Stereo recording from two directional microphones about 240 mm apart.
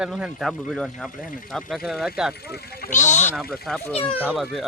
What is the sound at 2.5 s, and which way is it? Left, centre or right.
Speech, left.